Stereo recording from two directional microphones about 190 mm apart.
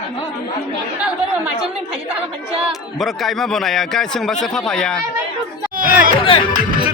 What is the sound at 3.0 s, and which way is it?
A man's voice, centre (ahead or behind).